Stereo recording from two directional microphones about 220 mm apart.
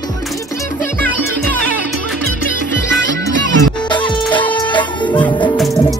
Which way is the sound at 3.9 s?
20° left (ahead or behind).